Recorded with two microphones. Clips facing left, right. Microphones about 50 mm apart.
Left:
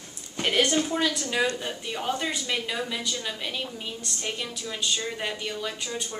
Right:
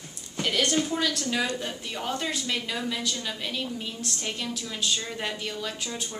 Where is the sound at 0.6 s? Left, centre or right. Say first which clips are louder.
Left 2 dB; centre.